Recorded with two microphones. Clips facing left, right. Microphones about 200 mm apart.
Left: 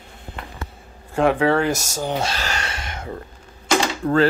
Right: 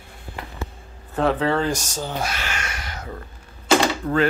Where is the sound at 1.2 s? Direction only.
10° left (ahead or behind).